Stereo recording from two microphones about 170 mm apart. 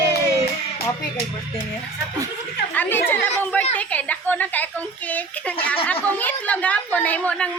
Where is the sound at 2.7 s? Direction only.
10° left (ahead or behind).